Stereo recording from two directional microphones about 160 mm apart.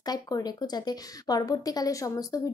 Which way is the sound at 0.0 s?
25° left (ahead or behind).